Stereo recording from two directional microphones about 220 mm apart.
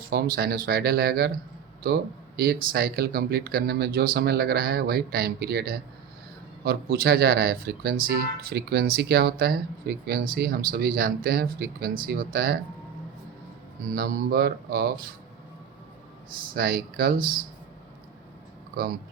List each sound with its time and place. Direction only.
0.3 s speech: 40° right (ahead or behind)
13.9 s speech: 45° right (ahead or behind)
16.6 s speech: 40° right (ahead or behind)